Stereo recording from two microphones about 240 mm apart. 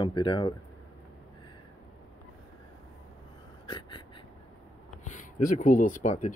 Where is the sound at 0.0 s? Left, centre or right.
Left.